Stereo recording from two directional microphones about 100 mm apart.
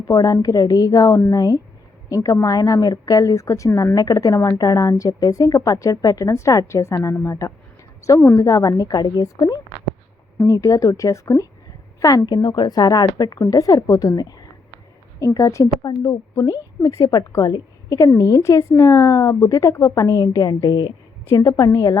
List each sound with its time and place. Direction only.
0.1 s a woman's voice: 40° left (ahead or behind)
21.5 s a woman's voice: 30° left (ahead or behind)